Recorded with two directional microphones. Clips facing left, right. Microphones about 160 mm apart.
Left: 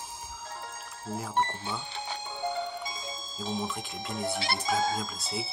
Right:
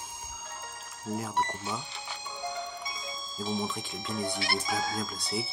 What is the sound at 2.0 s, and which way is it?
Music, 30° left (ahead or behind).